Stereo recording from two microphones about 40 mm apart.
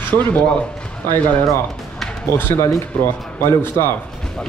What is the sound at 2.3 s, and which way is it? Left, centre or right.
Speech, left.